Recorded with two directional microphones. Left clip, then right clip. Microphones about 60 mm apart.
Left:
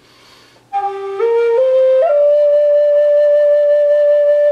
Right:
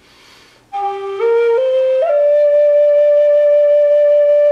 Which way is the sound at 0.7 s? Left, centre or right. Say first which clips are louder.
Left 1 dB; centre.